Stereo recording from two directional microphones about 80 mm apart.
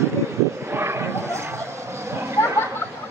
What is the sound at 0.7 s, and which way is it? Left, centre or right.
Bow-wow, right.